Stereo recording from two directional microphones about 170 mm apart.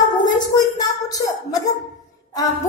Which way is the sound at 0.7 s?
20° left (ahead or behind).